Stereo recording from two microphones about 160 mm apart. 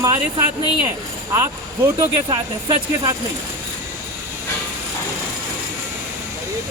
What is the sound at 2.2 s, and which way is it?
Speech, 25° right (ahead or behind).